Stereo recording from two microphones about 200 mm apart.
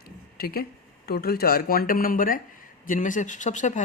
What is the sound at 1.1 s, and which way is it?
Speech, 50° left (ahead or behind).